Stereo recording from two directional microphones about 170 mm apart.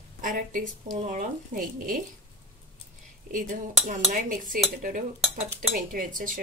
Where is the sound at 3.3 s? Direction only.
50° right (ahead or behind).